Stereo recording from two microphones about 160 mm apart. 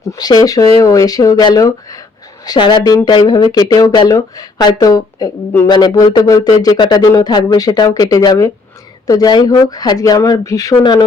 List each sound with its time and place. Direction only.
0.1 s speech: 25° left (ahead or behind)